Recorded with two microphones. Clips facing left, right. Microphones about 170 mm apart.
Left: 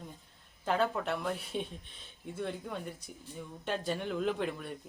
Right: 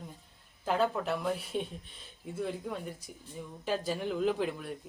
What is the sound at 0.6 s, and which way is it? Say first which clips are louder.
A woman's voice: right 1 dB; centre (ahead or behind).